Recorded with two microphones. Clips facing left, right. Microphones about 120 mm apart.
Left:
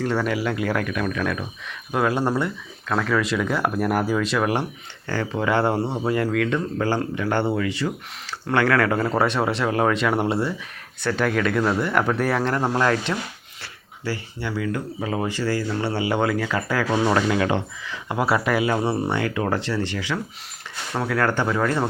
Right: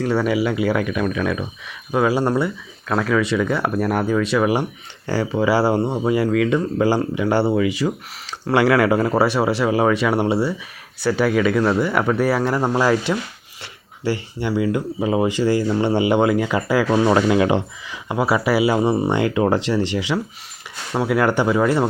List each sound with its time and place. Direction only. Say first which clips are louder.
0.0 s speech: right 4 dB; 5° right (ahead or behind)
13.6 s speech: right 6 dB; 20° right (ahead or behind)
18.1 s speech: right 3 dB; 5° right (ahead or behind)